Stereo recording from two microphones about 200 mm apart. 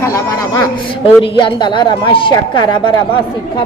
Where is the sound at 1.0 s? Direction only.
25° left (ahead or behind).